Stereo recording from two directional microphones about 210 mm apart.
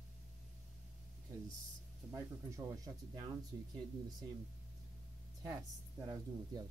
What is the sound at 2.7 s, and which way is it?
Speech, 15° right (ahead or behind).